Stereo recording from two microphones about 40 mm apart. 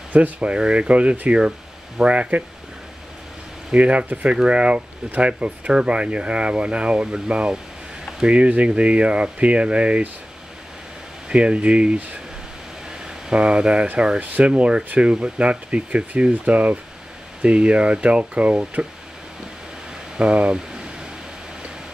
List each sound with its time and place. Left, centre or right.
0.1 s speech: right
0.5 s speech: right
3.7 s speech: right
11.2 s speech: right
14.2 s speech: right
20.2 s speech: right